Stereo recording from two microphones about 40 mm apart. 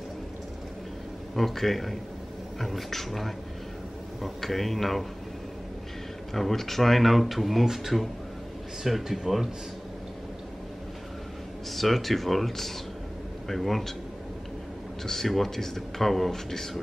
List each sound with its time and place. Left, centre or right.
1.3 s speech: centre
6.3 s speech: centre
11.7 s speech: centre
15.0 s speech: centre